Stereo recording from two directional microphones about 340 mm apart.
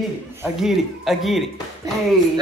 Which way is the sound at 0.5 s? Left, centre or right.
Centre.